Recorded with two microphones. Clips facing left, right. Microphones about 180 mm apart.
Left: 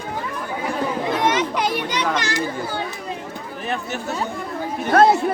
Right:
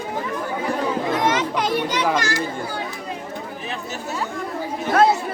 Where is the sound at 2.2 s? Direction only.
20° left (ahead or behind).